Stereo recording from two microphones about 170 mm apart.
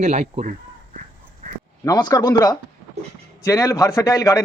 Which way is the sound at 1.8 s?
20° left (ahead or behind).